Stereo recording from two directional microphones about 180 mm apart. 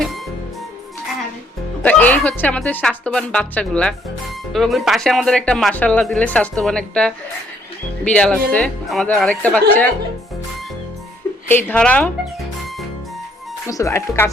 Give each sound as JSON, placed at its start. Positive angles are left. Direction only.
{"t": 1.8, "sound": "speech", "side_deg": 10}
{"t": 11.4, "sound": "speech", "side_deg": 10}
{"t": 13.7, "sound": "speech", "side_deg": 15}